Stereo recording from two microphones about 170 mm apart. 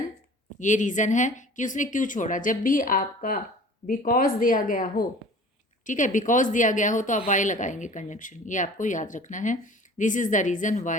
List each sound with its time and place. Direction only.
0.6 s a woman's voice: 45° left (ahead or behind)